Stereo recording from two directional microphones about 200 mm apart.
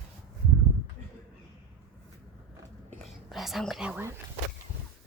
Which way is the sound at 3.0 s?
Centre (ahead or behind).